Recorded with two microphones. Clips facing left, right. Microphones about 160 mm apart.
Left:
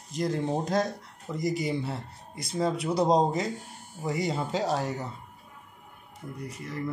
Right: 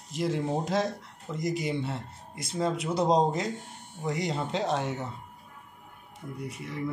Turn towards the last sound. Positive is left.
turn(degrees=0)  # may be behind; listen again after turning